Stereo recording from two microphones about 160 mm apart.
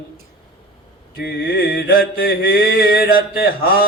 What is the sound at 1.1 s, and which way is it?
Mantra, 70° left (ahead or behind).